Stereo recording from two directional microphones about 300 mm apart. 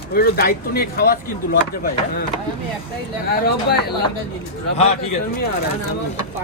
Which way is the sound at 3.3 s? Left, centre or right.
Left.